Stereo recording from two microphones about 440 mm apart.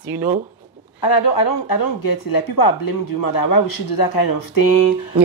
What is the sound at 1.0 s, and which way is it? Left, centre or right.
Speech, left.